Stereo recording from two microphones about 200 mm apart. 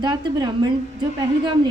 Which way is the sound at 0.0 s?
20° right (ahead or behind).